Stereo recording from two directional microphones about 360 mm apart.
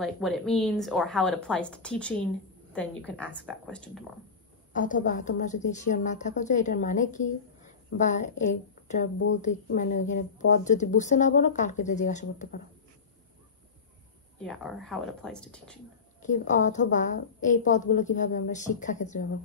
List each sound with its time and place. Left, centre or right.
0.0 s a woman's voice: centre
4.7 s a woman's voice: left
14.4 s a woman's voice: centre
16.2 s a woman's voice: centre